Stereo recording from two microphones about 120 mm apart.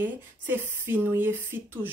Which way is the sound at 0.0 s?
15° right (ahead or behind).